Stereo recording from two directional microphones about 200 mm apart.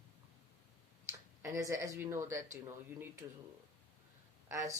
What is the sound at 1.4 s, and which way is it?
Speech, 15° right (ahead or behind).